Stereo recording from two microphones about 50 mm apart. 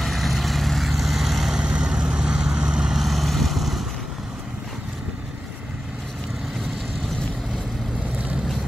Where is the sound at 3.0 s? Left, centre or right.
Centre.